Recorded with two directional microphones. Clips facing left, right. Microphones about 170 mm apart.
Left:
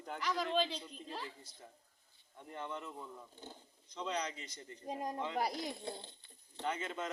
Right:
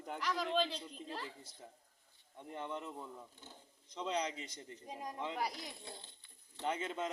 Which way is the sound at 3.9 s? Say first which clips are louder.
Right 1 dB; 20° right (ahead or behind).